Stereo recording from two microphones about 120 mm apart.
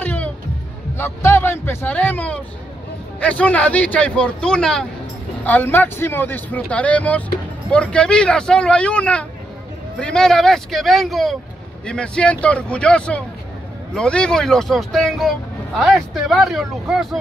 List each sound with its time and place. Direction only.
0.0 s music: 15° left (ahead or behind)
0.9 s speech: 20° left (ahead or behind); by 17.2 s 5° right (ahead or behind)